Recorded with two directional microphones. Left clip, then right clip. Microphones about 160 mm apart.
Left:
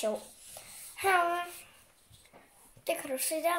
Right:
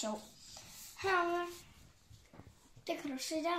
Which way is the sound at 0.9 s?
70° left (ahead or behind).